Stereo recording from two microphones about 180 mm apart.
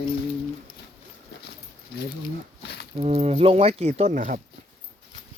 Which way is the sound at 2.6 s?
70° left (ahead or behind).